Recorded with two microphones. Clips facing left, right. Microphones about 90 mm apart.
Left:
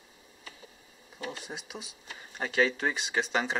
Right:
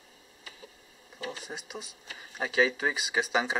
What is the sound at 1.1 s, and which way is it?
Speech, centre (ahead or behind).